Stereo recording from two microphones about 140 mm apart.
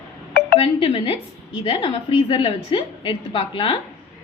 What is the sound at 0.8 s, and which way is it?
A woman's voice, 45° left (ahead or behind).